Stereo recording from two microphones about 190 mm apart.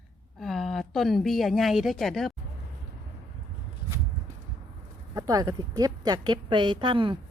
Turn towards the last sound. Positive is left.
turn(degrees=-25)  # may be behind; listen again after turning